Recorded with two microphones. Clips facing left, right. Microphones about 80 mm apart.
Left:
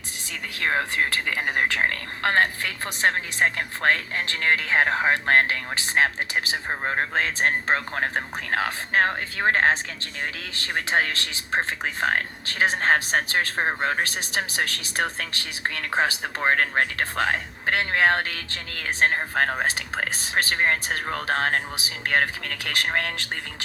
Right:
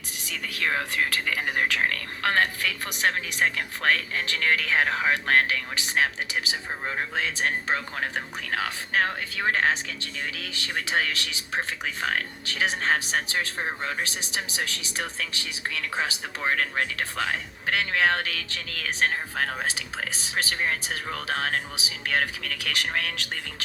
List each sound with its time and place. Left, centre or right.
0.3 s speech: left
19.1 s speech: left